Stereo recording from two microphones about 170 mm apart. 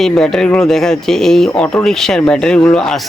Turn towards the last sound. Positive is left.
turn(degrees=5)  # may be behind; listen again after turning